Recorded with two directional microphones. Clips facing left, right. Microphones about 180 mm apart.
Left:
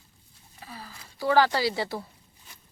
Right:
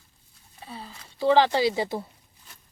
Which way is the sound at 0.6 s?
25° right (ahead or behind).